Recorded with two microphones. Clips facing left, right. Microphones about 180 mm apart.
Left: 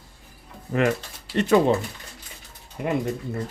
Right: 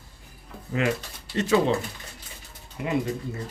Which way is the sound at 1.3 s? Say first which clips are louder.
Left 3 dB; 60° left (ahead or behind).